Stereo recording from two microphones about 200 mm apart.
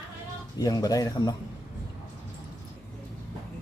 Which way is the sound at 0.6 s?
20° left (ahead or behind).